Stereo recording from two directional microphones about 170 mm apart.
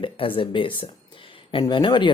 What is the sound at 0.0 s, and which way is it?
Speech, 30° left (ahead or behind).